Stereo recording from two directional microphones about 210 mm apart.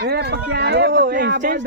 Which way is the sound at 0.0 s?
50° right (ahead or behind).